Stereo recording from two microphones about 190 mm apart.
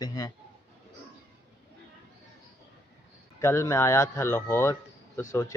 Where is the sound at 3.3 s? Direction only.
15° left (ahead or behind).